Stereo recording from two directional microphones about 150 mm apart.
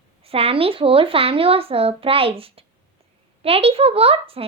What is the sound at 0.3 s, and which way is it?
A woman's voice, 40° right (ahead or behind).